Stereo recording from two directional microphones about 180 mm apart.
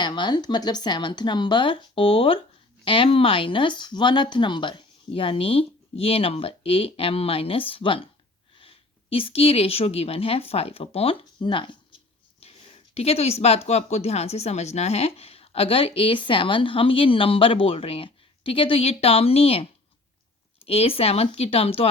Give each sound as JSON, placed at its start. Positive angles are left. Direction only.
{"t": 0.0, "sound": "a woman's voice", "side_deg": 25}
{"t": 20.7, "sound": "speech", "side_deg": 35}